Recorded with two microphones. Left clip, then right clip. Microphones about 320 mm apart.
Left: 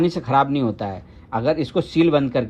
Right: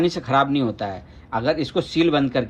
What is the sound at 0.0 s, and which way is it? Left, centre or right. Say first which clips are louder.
A man's voice: left 1 dB; left.